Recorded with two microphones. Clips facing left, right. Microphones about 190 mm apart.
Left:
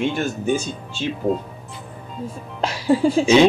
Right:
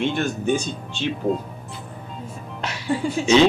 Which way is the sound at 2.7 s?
35° left (ahead or behind).